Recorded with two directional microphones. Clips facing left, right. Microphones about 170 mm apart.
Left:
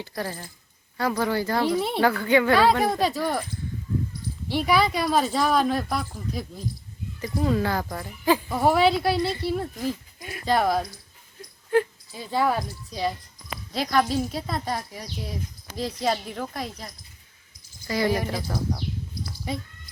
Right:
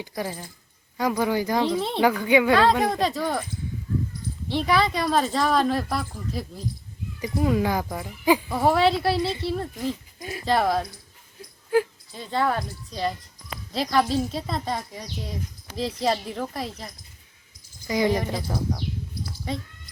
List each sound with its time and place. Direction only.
0.2 s speech: 10° right (ahead or behind)
1.6 s speech: 5° left (ahead or behind)
2.0 s speech: 15° right (ahead or behind)
2.6 s speech: 5° left (ahead or behind)
4.4 s speech: 5° left (ahead or behind)
7.2 s speech: 10° right (ahead or behind)
8.4 s speech: centre (ahead or behind)
10.2 s speech: 30° right (ahead or behind)
10.4 s speech: centre (ahead or behind)
17.8 s speech: 15° right (ahead or behind)
18.3 s speech: centre (ahead or behind)